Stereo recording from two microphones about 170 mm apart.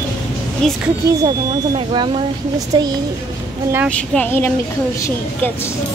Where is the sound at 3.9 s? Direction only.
10° left (ahead or behind).